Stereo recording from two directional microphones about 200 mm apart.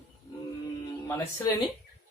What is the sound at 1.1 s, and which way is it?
Speech, 10° left (ahead or behind).